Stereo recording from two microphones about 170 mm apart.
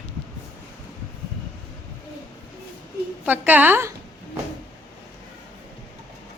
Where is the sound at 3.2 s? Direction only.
10° right (ahead or behind).